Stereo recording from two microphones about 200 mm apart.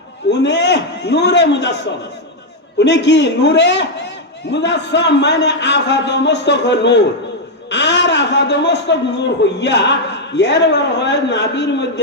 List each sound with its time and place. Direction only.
0.3 s a man's voice: 60° left (ahead or behind)